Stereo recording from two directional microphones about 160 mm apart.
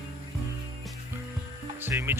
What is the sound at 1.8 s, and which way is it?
Speech, 15° right (ahead or behind).